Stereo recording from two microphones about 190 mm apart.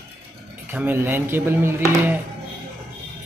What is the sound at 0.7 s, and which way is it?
Speech, 10° right (ahead or behind).